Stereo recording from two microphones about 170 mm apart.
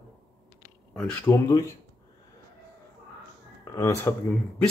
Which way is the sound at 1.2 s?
20° left (ahead or behind).